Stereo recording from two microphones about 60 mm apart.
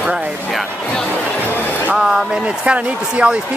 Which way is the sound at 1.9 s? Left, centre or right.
Centre.